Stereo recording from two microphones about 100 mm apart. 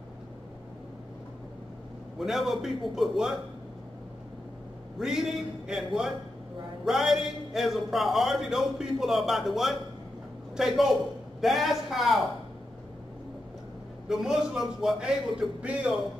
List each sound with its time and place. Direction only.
2.1 s a man's voice: centre (ahead or behind)
4.9 s a man's voice: 5° right (ahead or behind)
14.0 s a man's voice: 5° right (ahead or behind)